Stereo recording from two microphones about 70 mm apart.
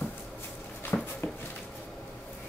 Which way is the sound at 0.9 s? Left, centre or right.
Left.